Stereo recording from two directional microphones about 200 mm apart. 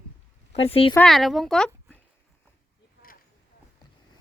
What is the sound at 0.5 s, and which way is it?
Speech, 30° left (ahead or behind).